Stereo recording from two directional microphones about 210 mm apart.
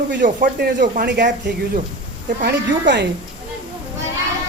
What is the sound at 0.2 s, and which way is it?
Speech, 45° right (ahead or behind).